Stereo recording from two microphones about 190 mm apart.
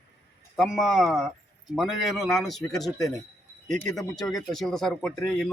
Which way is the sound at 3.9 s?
Centre (ahead or behind).